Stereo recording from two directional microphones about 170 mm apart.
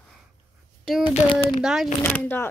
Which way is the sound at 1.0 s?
30° left (ahead or behind).